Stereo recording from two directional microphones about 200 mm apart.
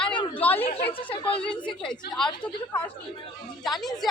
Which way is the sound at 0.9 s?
25° left (ahead or behind).